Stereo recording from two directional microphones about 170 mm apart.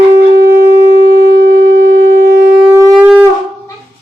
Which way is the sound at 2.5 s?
5° right (ahead or behind).